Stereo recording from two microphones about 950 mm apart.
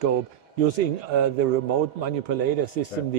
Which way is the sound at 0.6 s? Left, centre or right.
Right.